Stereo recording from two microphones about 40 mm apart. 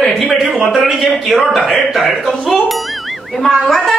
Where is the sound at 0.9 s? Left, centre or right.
Centre.